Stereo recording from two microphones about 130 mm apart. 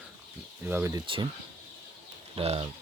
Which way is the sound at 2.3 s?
45° right (ahead or behind).